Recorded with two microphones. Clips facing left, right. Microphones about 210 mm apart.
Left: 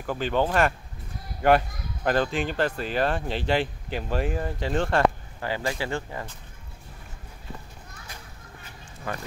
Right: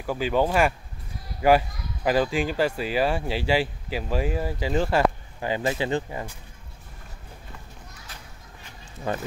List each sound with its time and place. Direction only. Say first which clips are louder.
0.0 s speech: right 2 dB; 5° right (ahead or behind)
5.4 s speech: right 3 dB; 20° right (ahead or behind)